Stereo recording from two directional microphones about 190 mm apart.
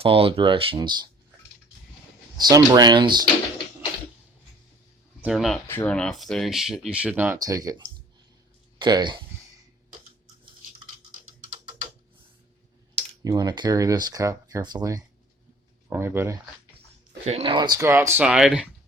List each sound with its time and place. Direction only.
0.0 s speech: 30° right (ahead or behind)
2.4 s speech: 20° right (ahead or behind)
5.2 s speech: centre (ahead or behind)
5.6 s speech: 10° left (ahead or behind); by 7.8 s 20° right (ahead or behind)
8.8 s speech: 25° right (ahead or behind)
13.2 s speech: 20° right (ahead or behind)
17.2 s speech: 30° right (ahead or behind); by 18.7 s centre (ahead or behind)